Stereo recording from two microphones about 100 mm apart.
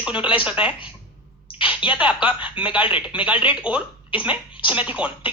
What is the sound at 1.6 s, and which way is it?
Speech, 15° right (ahead or behind).